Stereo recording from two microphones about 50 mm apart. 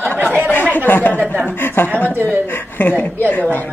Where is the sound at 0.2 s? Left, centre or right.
Right.